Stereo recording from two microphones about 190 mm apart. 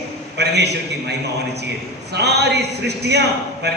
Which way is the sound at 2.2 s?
60° right (ahead or behind).